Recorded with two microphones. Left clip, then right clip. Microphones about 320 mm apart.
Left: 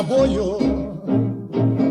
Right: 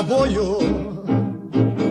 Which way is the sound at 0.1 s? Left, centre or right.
Right.